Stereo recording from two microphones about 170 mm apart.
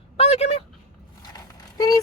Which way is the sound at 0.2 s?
35° left (ahead or behind).